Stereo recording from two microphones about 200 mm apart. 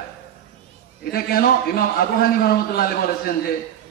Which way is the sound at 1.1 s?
50° left (ahead or behind).